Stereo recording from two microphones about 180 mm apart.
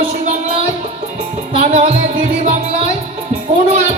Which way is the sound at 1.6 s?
40° right (ahead or behind).